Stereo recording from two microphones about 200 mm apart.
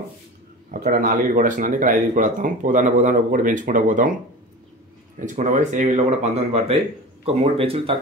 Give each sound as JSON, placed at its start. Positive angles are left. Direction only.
{"t": 0.7, "sound": "speech", "side_deg": -45}
{"t": 5.2, "sound": "speech", "side_deg": -40}